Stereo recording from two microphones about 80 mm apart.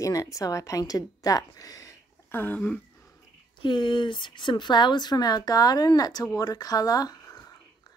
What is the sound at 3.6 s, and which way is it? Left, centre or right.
A woman's voice, left.